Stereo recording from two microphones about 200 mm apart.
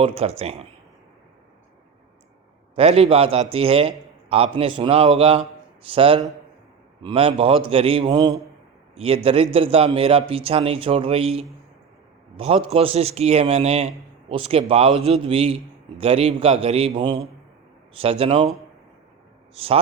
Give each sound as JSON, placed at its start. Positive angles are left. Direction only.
{"t": 0.0, "sound": "a man's voice", "side_deg": -30}
{"t": 2.7, "sound": "a man's voice", "side_deg": -30}